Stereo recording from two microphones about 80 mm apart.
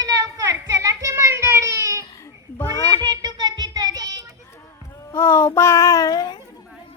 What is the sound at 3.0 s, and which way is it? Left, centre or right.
Child singing, right.